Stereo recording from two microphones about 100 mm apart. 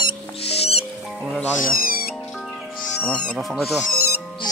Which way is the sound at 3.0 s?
10° left (ahead or behind).